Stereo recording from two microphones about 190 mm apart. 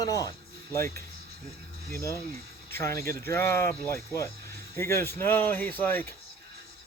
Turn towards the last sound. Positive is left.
turn(degrees=10)  # may be behind; listen again after turning